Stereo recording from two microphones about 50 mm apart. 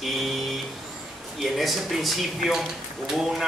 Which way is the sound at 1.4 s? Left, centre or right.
Centre.